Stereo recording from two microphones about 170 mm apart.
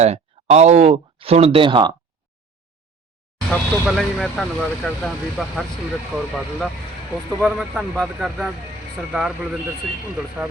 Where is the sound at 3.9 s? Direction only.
Centre (ahead or behind).